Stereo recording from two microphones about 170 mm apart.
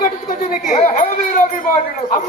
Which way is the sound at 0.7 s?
45° left (ahead or behind).